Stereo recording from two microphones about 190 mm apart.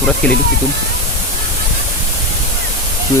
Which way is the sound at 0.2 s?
10° left (ahead or behind).